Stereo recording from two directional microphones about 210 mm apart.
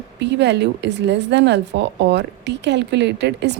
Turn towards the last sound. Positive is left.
turn(degrees=-55)  # may be behind; listen again after turning